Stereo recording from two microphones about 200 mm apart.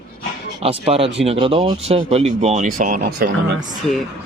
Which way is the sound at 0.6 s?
30° right (ahead or behind).